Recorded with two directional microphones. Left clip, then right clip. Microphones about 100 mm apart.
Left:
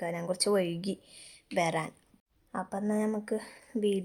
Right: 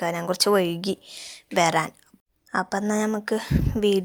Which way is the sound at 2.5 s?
30° right (ahead or behind).